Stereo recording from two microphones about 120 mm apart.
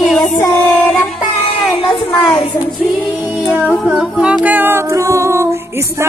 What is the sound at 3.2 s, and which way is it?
Music, 5° right (ahead or behind).